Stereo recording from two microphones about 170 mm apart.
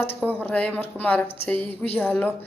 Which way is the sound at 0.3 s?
10° left (ahead or behind).